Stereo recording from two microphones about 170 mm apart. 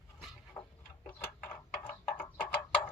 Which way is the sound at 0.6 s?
20° left (ahead or behind).